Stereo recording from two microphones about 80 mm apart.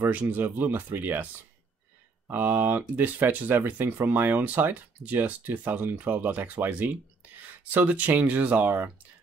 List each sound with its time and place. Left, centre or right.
0.0 s speech: centre
2.3 s speech: right